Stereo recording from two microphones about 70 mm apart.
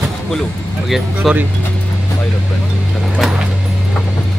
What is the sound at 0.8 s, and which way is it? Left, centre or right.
Speech, centre.